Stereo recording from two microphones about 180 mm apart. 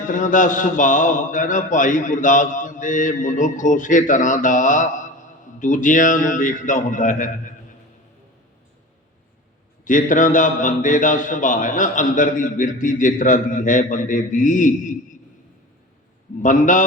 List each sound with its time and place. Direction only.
0.1 s a man's voice: 45° left (ahead or behind)
9.8 s a man's voice: 45° left (ahead or behind)
16.4 s a man's voice: 45° left (ahead or behind)